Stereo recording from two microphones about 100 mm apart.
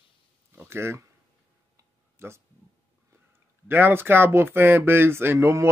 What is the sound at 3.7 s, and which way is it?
Speech, 20° right (ahead or behind).